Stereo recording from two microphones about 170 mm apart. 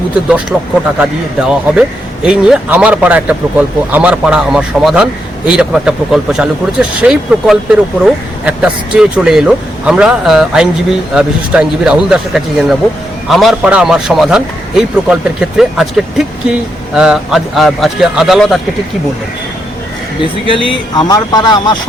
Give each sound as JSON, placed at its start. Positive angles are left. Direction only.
{"t": 0.5, "sound": "a man's voice", "side_deg": 0}
{"t": 20.5, "sound": "speech", "side_deg": 30}